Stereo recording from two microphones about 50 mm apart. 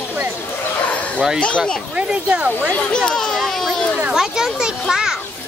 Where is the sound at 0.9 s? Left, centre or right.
Left.